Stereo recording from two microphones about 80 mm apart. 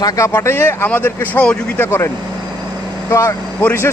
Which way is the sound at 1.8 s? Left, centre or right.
Left.